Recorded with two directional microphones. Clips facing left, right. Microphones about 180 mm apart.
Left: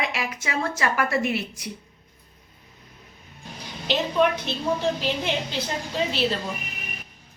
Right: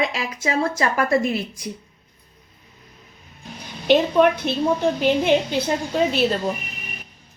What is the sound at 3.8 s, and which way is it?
A woman's voice, 55° right (ahead or behind).